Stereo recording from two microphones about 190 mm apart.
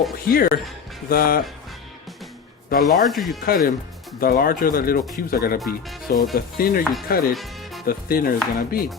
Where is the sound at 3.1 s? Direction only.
Centre (ahead or behind).